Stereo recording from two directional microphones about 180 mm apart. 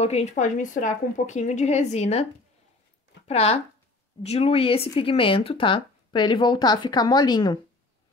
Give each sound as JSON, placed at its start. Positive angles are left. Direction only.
{"t": 0.0, "sound": "speech", "side_deg": 35}
{"t": 3.3, "sound": "speech", "side_deg": 35}